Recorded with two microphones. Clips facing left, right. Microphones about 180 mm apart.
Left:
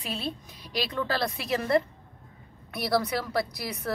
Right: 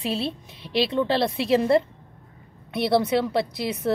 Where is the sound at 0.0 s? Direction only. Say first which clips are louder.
Right 7 dB; 30° right (ahead or behind).